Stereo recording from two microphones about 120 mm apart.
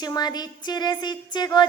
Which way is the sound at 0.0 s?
35° left (ahead or behind).